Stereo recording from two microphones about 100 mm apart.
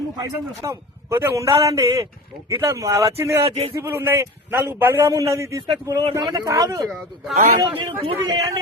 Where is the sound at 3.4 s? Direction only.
90° right.